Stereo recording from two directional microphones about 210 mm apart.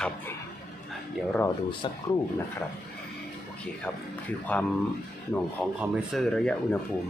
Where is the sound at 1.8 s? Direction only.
25° left (ahead or behind).